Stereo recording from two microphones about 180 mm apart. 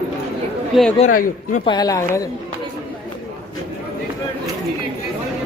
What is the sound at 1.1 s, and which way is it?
Speech, 50° left (ahead or behind).